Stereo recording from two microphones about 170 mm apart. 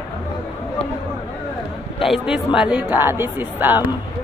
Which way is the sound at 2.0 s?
Centre (ahead or behind).